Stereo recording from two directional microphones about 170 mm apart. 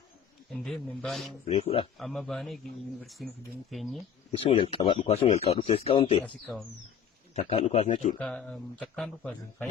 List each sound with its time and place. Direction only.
0.5 s speech: centre (ahead or behind)
1.5 s speech: 35° left (ahead or behind)
2.0 s speech: centre (ahead or behind)
4.3 s speech: 30° left (ahead or behind)
6.2 s speech: 10° left (ahead or behind)
7.3 s speech: 40° left (ahead or behind)
8.2 s speech: 5° left (ahead or behind)